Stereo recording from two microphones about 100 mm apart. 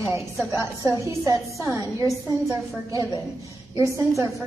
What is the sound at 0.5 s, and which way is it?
Speech, 35° left (ahead or behind).